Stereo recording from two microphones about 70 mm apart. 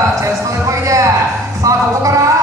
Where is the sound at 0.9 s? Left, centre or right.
Right.